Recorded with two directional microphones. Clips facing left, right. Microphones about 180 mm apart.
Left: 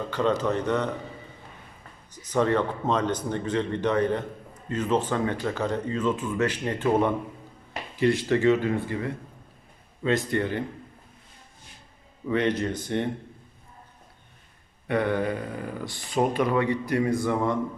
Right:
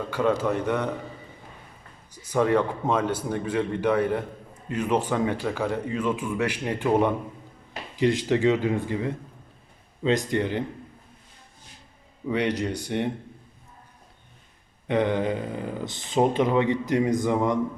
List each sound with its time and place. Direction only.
0.1 s speech: 10° right (ahead or behind)
2.1 s speech: 10° right (ahead or behind)
12.3 s speech: 15° right (ahead or behind)
14.8 s speech: 20° right (ahead or behind)